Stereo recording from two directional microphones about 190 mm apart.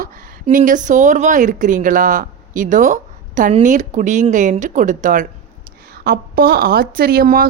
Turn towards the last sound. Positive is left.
turn(degrees=-50)  # may be behind; listen again after turning